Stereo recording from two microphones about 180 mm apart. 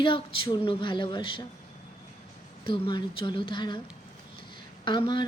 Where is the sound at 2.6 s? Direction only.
30° left (ahead or behind).